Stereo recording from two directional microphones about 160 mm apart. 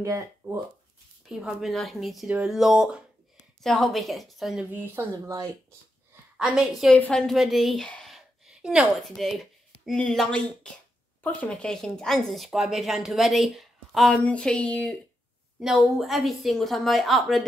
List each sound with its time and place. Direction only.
0.4 s speech: 15° right (ahead or behind)
1.3 s speech: centre (ahead or behind)
4.7 s speech: 15° right (ahead or behind)
6.3 s a woman's voice: 5° right (ahead or behind)